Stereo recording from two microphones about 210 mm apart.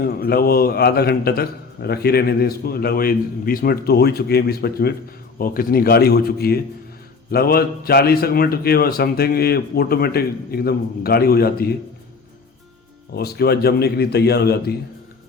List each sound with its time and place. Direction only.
0.0 s a man's voice: 45° left (ahead or behind)
13.1 s a man's voice: 50° left (ahead or behind)